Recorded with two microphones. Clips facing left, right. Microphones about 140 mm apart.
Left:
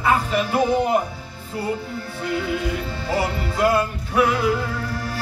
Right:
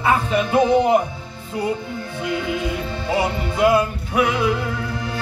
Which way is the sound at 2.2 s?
20° right (ahead or behind).